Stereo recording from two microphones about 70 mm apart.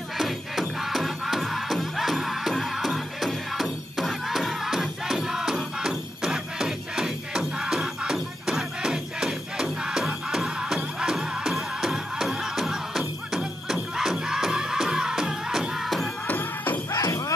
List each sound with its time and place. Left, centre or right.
0.2 s music: centre
16.3 s music: left
16.9 s music: left